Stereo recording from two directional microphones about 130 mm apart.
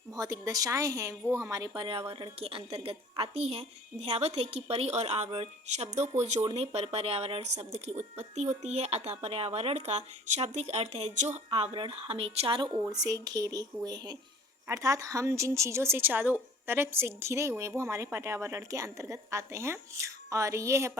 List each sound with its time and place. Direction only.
0.1 s a woman's voice: 25° right (ahead or behind)
1.7 s a woman's voice: 40° right (ahead or behind); by 11.3 s 65° right (ahead or behind)
11.5 s a woman's voice: 40° right (ahead or behind)
12.9 s a woman's voice: 30° right (ahead or behind)